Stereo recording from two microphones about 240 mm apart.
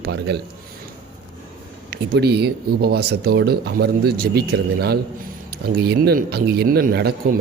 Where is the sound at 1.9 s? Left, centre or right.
Right.